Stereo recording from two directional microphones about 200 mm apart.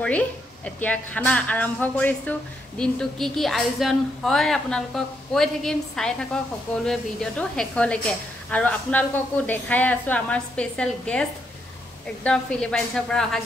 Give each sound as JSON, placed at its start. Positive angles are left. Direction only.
{"t": 0.0, "sound": "a woman's voice", "side_deg": 5}